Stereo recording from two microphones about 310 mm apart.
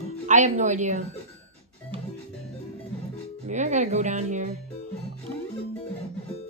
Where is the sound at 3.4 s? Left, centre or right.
Right.